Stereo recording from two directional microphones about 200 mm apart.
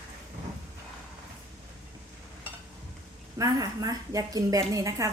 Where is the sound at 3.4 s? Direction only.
20° right (ahead or behind).